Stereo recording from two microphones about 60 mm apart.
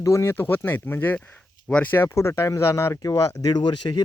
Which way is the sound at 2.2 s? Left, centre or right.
Left.